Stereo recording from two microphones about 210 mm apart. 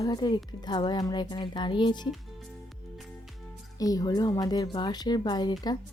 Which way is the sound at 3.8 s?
15° left (ahead or behind).